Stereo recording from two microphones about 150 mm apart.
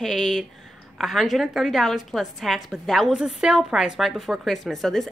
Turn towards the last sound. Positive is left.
turn(degrees=0)  # may be behind; listen again after turning